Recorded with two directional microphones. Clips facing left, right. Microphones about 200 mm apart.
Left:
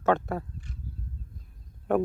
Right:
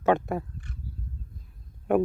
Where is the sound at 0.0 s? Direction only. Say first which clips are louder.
Right 2 dB; 15° right (ahead or behind).